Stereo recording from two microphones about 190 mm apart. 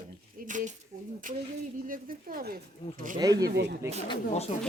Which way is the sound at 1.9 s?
50° right (ahead or behind).